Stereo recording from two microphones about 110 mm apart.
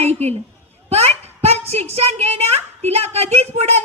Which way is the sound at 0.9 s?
70° right (ahead or behind).